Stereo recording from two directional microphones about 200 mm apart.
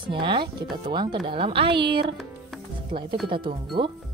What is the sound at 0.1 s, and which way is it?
Speech, 25° right (ahead or behind).